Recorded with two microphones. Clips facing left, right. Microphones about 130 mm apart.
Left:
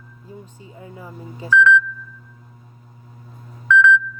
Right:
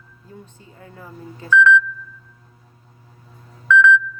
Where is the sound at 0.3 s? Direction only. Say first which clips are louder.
Left 2 dB; 15° left (ahead or behind).